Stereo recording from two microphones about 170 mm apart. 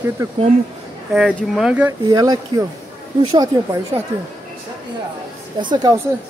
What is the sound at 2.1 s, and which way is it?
Speech, 25° right (ahead or behind).